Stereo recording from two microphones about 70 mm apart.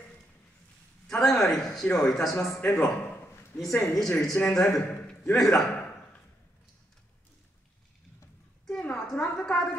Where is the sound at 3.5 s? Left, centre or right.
Centre.